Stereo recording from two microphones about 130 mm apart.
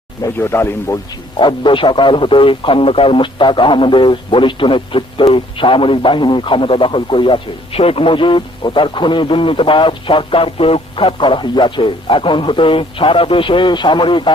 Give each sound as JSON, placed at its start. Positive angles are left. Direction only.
{"t": 0.3, "sound": "speech", "side_deg": 20}
{"t": 1.4, "sound": "speech", "side_deg": 40}